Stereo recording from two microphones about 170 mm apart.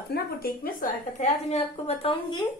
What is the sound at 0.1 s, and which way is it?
A woman's voice, 55° left (ahead or behind).